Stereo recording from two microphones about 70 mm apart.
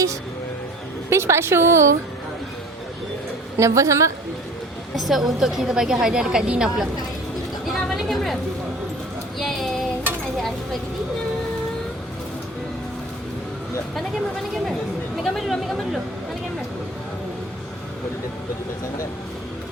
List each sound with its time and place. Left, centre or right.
1.1 s a woman's voice: right
3.6 s a woman's voice: right
4.9 s a woman's voice: centre
7.6 s a sound: centre
9.4 s speech: centre
15.2 s a woman's voice: centre